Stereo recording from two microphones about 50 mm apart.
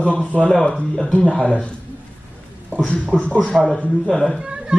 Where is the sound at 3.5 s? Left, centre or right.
Centre.